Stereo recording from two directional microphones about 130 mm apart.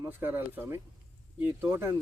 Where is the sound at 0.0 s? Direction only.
15° right (ahead or behind).